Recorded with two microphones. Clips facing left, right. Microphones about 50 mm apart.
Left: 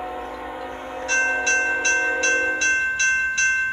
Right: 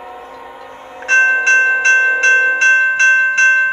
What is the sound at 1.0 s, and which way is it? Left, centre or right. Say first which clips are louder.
Tubular bells: right 10 dB; right.